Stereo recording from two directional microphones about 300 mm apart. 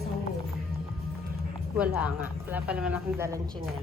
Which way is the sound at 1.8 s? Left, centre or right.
Centre.